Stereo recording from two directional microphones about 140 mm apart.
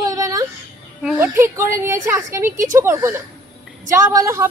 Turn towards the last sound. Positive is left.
turn(degrees=-20)  # may be behind; listen again after turning